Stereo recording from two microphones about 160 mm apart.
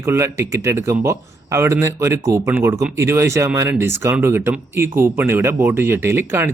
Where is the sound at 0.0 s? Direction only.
15° right (ahead or behind).